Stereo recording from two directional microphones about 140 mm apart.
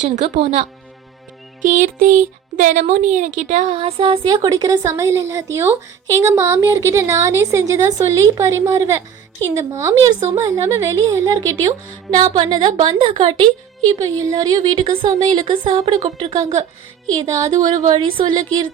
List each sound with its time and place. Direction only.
0.0 s speech: 60° right (ahead or behind)
1.6 s music: 70° right (ahead or behind)
2.9 s a woman's voice: 65° right (ahead or behind); by 18.7 s 30° right (ahead or behind)